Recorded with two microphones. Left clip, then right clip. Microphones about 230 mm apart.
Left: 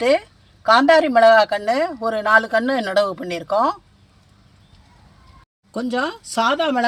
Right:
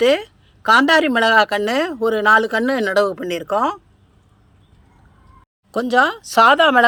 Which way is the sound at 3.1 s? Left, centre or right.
Right.